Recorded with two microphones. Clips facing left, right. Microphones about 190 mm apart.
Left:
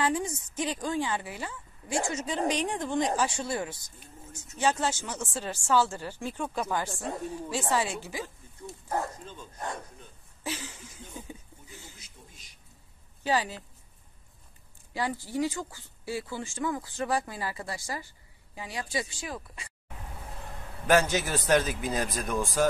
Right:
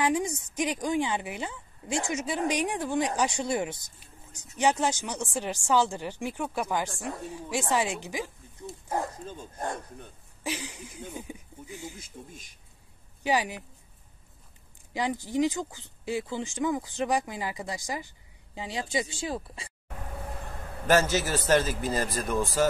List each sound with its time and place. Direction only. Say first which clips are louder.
0.0 s a woman's voice: right 2 dB; 15° right (ahead or behind)
9.2 s speech: right 4 dB; 45° right (ahead or behind)
10.4 s speech: right 2 dB; 15° right (ahead or behind)
12.0 s speech: right 9 dB; 50° right (ahead or behind)
13.2 s speech: right 1 dB; 15° right (ahead or behind)
15.0 s speech: right 3 dB; 20° right (ahead or behind)
21.0 s speech: right 2 dB; centre (ahead or behind)